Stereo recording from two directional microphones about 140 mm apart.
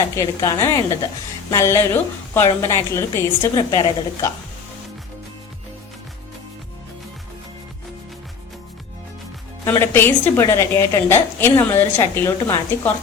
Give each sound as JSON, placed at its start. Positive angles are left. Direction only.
{"t": 0.2, "sound": "a woman's voice", "side_deg": 25}
{"t": 9.6, "sound": "a woman's voice", "side_deg": 15}